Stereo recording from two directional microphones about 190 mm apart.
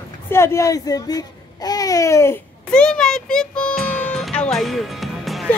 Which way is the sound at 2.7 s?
5° left (ahead or behind).